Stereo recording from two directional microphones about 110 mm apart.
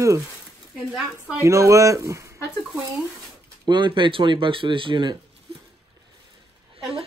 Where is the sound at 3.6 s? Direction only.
45° right (ahead or behind).